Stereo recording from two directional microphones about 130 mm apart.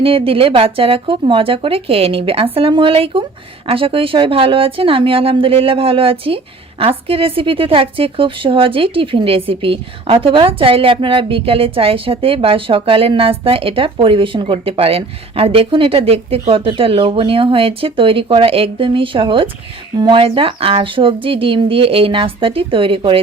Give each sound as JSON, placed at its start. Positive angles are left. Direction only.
{"t": 0.0, "sound": "speech", "side_deg": -45}